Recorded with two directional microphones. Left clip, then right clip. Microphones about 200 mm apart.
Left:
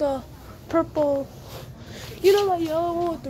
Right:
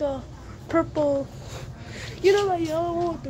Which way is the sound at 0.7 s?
5° left (ahead or behind).